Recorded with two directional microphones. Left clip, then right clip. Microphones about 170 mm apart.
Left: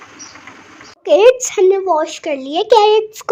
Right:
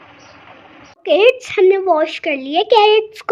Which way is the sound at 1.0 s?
5° left (ahead or behind).